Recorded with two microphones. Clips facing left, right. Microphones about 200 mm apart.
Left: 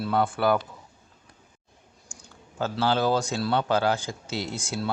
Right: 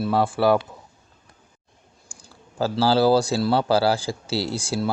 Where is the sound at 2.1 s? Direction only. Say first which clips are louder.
Right 1 dB; 35° right (ahead or behind).